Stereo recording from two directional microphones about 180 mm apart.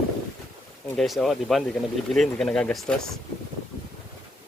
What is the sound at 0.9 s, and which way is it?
Speech, centre (ahead or behind).